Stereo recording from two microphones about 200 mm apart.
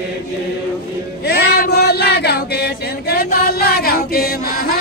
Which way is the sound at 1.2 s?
55° left (ahead or behind).